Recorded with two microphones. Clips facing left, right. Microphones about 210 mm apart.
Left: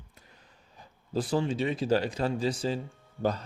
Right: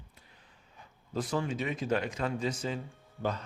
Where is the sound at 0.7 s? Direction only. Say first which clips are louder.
Left 4 dB; 35° left (ahead or behind).